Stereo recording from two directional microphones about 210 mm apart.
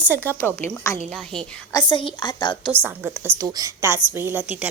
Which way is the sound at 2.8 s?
10° right (ahead or behind).